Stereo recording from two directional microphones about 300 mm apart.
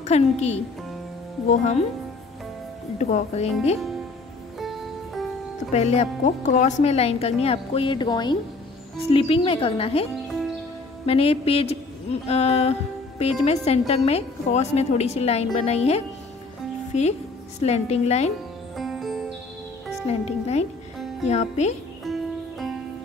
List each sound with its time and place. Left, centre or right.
0.0 s a woman's voice: left
3.0 s a woman's voice: left
4.6 s music: centre
5.7 s a woman's voice: left
11.1 s a woman's voice: centre
17.6 s a woman's voice: left
18.8 s music: centre
20.1 s a woman's voice: left
22.0 s music: centre